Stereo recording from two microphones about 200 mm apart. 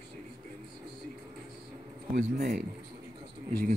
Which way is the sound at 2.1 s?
50° right (ahead or behind).